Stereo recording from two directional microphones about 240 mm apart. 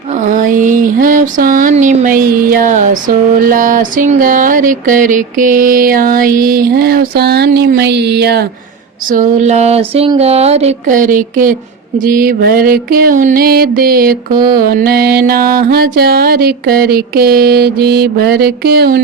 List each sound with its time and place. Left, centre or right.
0.1 s a sound: right
3.4 s music: right
9.0 s speech: right
11.9 s music: right